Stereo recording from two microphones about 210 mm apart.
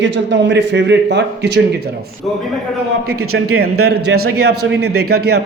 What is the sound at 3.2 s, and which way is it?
Speech, 90° right.